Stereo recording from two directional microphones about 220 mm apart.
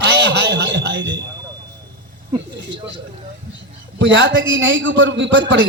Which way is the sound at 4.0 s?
55° right (ahead or behind).